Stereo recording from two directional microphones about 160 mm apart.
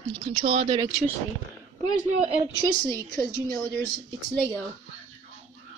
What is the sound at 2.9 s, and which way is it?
Speech, 20° right (ahead or behind).